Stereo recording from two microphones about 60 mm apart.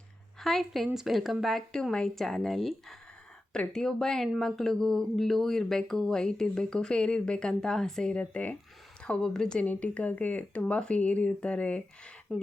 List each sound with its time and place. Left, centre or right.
0.3 s a woman's voice: centre
8.1 s speech: left
9.6 s speech: left
12.3 s speech: centre